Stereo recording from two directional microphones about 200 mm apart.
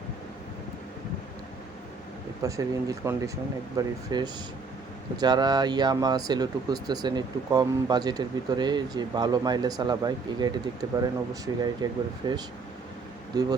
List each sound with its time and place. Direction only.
2.4 s speech: 15° right (ahead or behind)